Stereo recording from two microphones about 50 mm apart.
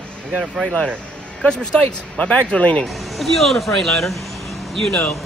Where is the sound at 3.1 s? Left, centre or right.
Centre.